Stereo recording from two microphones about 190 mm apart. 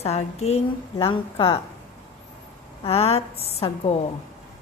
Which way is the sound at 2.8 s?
30° left (ahead or behind).